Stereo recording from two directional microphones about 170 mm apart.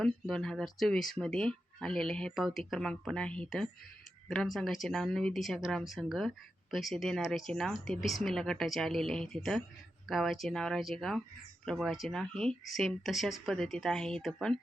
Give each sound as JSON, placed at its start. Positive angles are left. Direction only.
{"t": 0.0, "sound": "a woman's voice", "side_deg": 0}